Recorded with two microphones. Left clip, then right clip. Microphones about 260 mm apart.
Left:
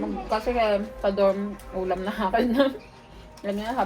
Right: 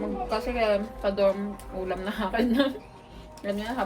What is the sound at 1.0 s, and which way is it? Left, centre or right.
A woman's voice, centre.